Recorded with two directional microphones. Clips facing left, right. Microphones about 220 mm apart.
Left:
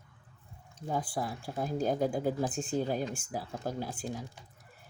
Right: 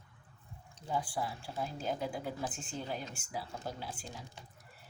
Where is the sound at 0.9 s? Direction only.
45° left (ahead or behind).